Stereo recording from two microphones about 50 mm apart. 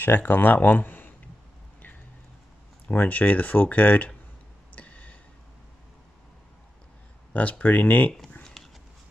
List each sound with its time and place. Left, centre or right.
0.0 s speech: left
2.9 s speech: left
4.7 s a sound: left
7.3 s speech: left
8.6 s dog: centre